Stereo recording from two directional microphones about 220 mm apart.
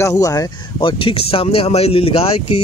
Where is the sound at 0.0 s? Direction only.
15° left (ahead or behind).